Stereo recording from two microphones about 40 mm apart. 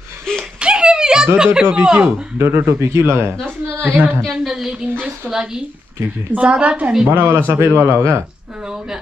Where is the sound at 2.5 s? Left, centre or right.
Right.